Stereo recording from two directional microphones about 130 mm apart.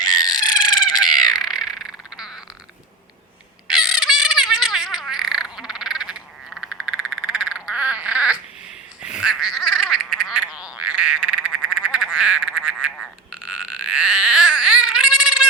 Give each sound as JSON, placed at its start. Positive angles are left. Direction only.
{"t": 0.0, "sound": "frog", "side_deg": 30}
{"t": 1.0, "sound": "crow", "side_deg": -5}
{"t": 1.4, "sound": "a sound", "side_deg": 0}
{"t": 3.7, "sound": "a sound", "side_deg": -5}
{"t": 11.4, "sound": "frog", "side_deg": -5}
{"t": 13.3, "sound": "baby cry", "side_deg": -10}